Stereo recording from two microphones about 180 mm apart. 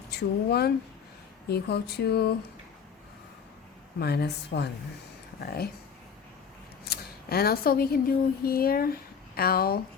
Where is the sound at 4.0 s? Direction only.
65° left (ahead or behind).